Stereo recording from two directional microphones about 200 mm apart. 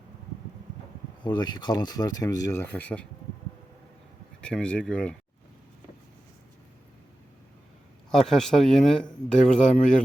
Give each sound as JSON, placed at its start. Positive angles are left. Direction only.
{"t": 1.2, "sound": "speech", "side_deg": 20}
{"t": 4.4, "sound": "speech", "side_deg": 5}
{"t": 8.1, "sound": "speech", "side_deg": 0}